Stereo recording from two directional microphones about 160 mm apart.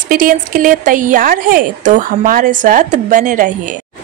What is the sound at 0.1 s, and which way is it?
A woman's voice, 60° right (ahead or behind).